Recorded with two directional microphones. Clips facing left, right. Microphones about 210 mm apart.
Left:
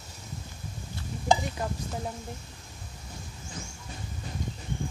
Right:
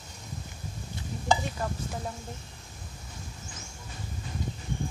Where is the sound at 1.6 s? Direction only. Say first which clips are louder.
Even; 20° left (ahead or behind).